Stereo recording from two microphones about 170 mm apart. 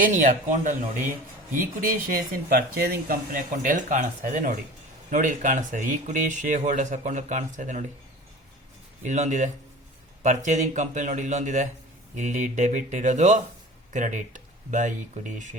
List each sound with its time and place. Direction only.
0.0 s speech: 50° right (ahead or behind)
9.0 s speech: 45° right (ahead or behind)